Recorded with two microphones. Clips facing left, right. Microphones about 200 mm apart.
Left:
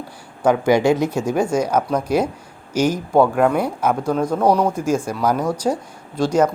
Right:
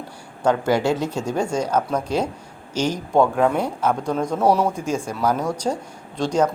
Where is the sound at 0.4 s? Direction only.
10° left (ahead or behind); by 4.8 s 5° right (ahead or behind).